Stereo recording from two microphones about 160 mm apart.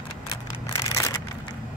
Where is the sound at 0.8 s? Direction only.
20° left (ahead or behind).